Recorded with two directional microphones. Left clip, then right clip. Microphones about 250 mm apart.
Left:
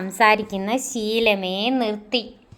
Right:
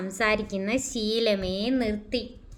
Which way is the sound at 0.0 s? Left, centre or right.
Centre.